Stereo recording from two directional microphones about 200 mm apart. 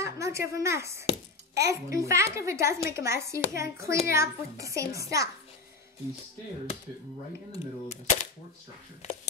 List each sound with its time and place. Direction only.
0.0 s a child's voice: 15° right (ahead or behind)
7.5 s speech: 35° left (ahead or behind)